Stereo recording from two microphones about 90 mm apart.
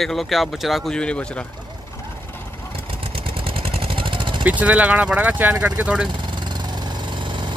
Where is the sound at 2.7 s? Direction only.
90° right; by 4.5 s 65° right (ahead or behind).